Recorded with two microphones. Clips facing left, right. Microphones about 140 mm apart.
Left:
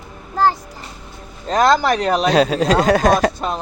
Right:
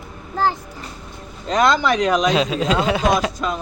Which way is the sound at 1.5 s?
35° left (ahead or behind).